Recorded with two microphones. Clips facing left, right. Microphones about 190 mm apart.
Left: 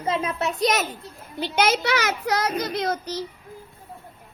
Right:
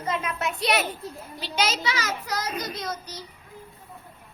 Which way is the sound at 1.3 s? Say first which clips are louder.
Left 6 dB; 55° left (ahead or behind).